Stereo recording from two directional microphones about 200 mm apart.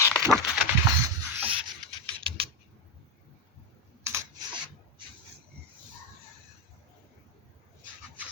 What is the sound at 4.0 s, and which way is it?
Rub, 15° right (ahead or behind).